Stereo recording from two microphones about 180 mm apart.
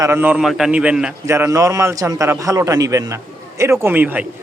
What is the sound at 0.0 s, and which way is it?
A man's voice, 10° right (ahead or behind).